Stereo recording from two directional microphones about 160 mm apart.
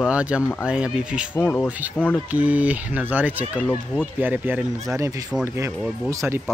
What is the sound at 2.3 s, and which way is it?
Speech, 10° right (ahead or behind).